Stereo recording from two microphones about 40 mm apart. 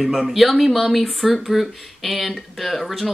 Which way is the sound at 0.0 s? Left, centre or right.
Centre.